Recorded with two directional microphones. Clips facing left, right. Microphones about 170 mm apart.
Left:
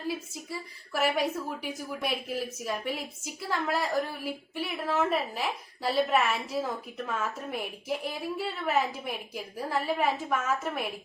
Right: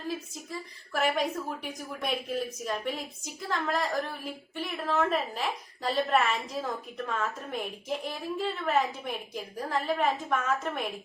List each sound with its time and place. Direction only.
0.9 s a woman's voice: 5° left (ahead or behind)